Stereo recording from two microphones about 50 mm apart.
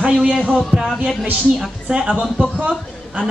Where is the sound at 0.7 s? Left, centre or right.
Right.